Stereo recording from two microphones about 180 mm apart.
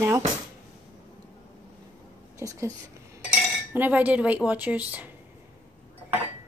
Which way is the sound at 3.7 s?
10° right (ahead or behind).